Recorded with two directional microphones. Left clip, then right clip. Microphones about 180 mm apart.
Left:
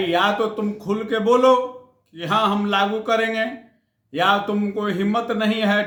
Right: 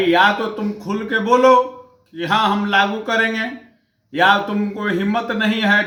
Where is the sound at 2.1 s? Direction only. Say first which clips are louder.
Right 3 dB; 25° left (ahead or behind).